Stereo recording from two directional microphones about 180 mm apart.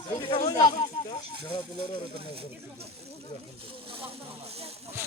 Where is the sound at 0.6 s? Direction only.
45° left (ahead or behind).